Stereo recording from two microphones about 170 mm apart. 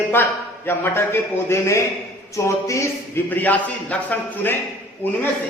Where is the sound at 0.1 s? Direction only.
15° left (ahead or behind).